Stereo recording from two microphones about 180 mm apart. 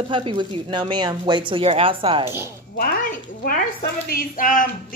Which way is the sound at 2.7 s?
50° left (ahead or behind).